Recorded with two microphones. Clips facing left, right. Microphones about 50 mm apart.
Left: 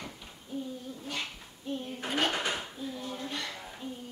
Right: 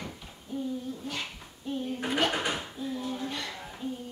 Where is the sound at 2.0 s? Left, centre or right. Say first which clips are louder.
Right 2 dB; centre.